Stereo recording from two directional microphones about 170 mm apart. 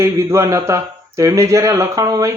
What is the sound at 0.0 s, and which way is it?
Speech, 15° right (ahead or behind).